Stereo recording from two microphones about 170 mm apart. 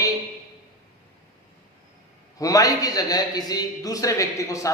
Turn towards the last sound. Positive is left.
turn(degrees=20)  # may be behind; listen again after turning